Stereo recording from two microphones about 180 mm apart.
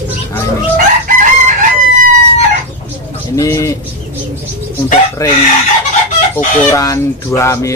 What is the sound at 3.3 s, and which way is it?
Speech, 20° left (ahead or behind).